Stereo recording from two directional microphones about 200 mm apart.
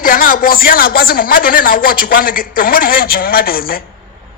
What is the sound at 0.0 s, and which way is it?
A man's voice, 45° left (ahead or behind).